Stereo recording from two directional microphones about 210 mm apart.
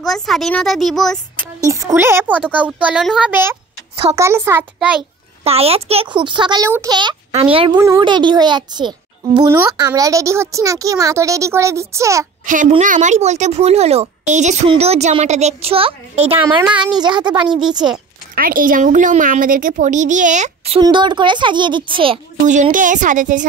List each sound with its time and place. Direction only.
0.0 s speech: centre (ahead or behind)
1.6 s a child's voice: 15° right (ahead or behind)
5.4 s a child's voice: 30° right (ahead or behind)
12.4 s a child's voice: 40° right (ahead or behind); by 17.5 s 20° right (ahead or behind)
17.6 s speech: 5° right (ahead or behind)
18.3 s speech: 40° right (ahead or behind)